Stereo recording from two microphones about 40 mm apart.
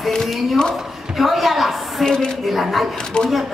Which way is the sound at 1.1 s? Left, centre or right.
Centre.